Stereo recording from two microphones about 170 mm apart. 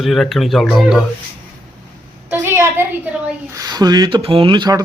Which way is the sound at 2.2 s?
15° right (ahead or behind).